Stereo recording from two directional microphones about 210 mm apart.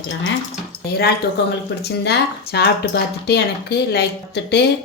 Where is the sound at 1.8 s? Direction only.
55° left (ahead or behind).